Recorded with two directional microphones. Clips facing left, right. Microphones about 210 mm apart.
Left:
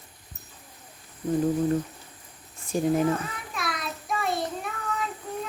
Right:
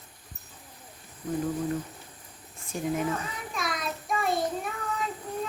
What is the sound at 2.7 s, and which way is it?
Speech, 35° left (ahead or behind).